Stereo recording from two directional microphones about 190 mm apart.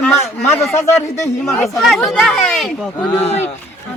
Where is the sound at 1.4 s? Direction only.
Centre (ahead or behind).